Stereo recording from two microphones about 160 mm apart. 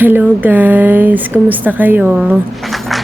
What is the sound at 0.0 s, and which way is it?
Speech, 10° right (ahead or behind).